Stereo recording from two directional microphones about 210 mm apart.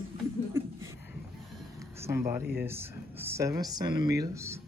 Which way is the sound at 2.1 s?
10° right (ahead or behind).